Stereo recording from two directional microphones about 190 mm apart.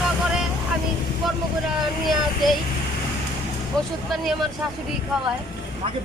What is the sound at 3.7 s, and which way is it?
Speech, 5° left (ahead or behind).